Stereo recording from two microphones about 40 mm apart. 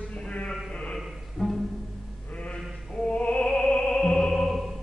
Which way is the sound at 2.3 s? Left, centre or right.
Left.